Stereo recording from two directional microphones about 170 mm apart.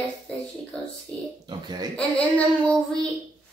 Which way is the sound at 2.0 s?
5° left (ahead or behind).